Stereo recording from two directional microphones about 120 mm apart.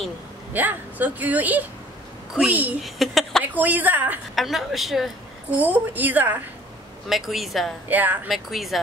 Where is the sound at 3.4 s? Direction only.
15° right (ahead or behind).